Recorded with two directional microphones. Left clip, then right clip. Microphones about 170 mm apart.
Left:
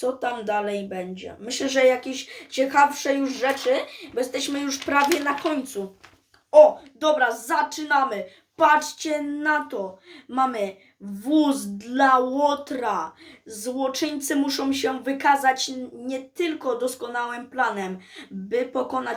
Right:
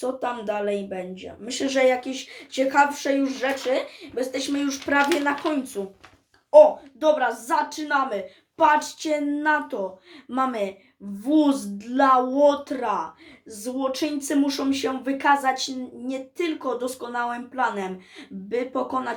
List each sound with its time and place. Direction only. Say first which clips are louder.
0.0 s speech: left 1 dB; centre (ahead or behind); by 10.8 s 15° right (ahead or behind)
11.2 s speech: right 1 dB; centre (ahead or behind)